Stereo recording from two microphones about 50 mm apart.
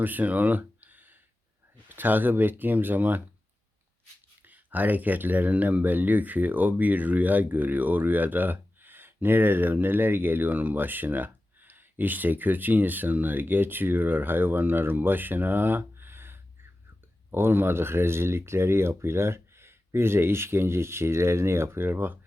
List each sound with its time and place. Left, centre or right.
0.0 s a sound: right
1.9 s speech: right
4.4 s speech: right